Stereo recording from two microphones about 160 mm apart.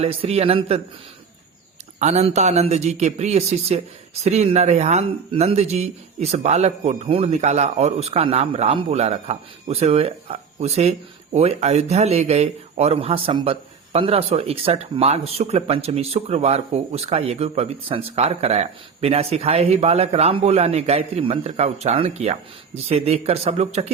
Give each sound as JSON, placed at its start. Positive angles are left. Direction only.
{"t": 0.0, "sound": "speech", "side_deg": -40}
{"t": 2.0, "sound": "speech", "side_deg": -45}